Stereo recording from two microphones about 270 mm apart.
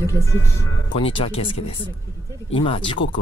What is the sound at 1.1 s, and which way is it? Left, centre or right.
Speech, left.